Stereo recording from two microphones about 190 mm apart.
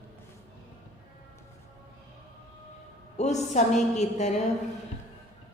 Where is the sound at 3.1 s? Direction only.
35° left (ahead or behind).